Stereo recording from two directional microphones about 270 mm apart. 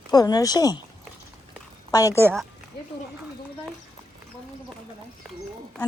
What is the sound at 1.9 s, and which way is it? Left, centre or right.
Speech, centre.